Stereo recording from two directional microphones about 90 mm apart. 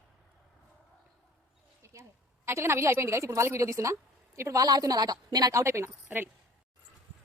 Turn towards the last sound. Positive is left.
turn(degrees=-20)  # may be behind; listen again after turning